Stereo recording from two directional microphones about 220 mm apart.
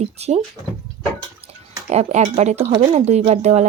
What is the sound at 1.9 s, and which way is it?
Speech, 30° right (ahead or behind).